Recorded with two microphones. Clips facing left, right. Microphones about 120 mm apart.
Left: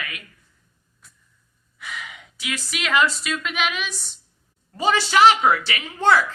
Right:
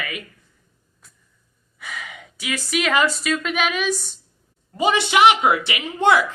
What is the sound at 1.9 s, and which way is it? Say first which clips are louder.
Gasp: right 1 dB; 45° right (ahead or behind).